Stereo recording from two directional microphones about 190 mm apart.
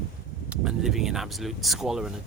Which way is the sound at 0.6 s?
Centre (ahead or behind).